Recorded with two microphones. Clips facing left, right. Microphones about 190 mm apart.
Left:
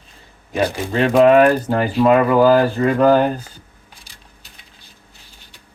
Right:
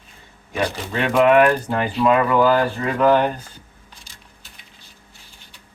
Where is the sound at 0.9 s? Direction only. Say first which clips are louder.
Left 4 dB; 35° left (ahead or behind).